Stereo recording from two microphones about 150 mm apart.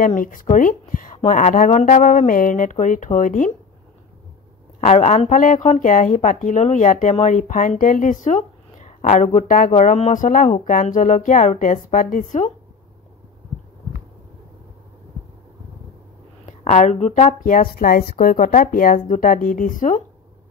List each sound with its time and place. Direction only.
0.0 s a woman's voice: 60° left (ahead or behind)
4.7 s speech: 50° left (ahead or behind)
5.4 s a woman's voice: 60° left (ahead or behind)
16.4 s a woman's voice: 50° left (ahead or behind)